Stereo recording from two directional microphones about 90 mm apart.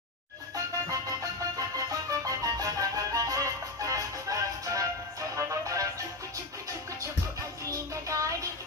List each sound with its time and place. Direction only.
0.8 s music: 40° right (ahead or behind)
7.7 s music: 35° right (ahead or behind)